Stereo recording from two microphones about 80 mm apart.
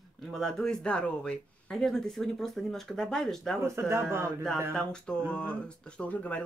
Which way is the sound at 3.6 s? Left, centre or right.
Right.